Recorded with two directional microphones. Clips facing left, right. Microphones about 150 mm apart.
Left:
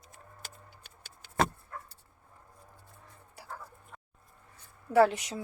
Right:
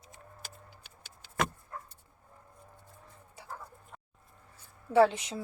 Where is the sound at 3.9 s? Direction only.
15° right (ahead or behind).